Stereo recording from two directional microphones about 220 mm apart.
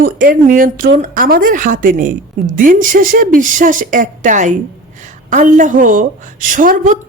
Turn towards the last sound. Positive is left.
turn(degrees=-40)  # may be behind; listen again after turning